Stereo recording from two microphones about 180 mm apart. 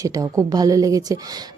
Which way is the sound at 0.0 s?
20° right (ahead or behind).